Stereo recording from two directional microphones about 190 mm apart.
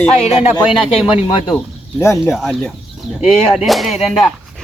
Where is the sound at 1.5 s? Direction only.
10° left (ahead or behind).